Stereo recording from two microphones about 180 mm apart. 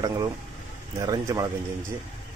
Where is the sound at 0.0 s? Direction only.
20° right (ahead or behind).